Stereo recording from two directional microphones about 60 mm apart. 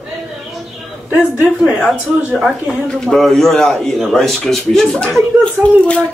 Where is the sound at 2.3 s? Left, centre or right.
Centre.